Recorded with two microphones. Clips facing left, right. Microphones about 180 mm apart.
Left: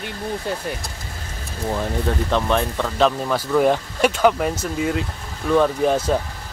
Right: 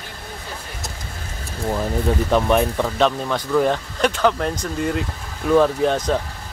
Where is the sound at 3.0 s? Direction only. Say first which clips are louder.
Left 2 dB; 5° left (ahead or behind).